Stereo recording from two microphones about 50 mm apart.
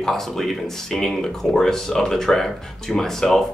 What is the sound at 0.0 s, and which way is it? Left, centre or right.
Speech, centre.